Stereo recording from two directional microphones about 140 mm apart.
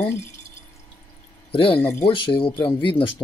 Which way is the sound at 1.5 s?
40° left (ahead or behind).